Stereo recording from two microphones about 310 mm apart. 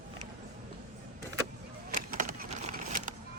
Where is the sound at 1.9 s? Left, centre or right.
Right.